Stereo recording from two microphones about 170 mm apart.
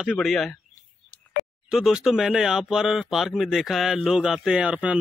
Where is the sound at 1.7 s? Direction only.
5° right (ahead or behind).